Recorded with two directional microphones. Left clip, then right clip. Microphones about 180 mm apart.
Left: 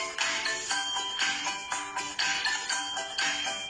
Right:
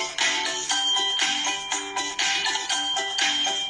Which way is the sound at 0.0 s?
25° right (ahead or behind).